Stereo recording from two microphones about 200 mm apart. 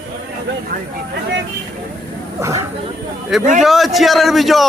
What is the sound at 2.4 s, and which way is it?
Speech, 15° right (ahead or behind).